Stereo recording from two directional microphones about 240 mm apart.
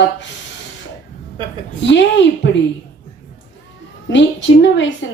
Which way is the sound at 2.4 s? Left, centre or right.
Left.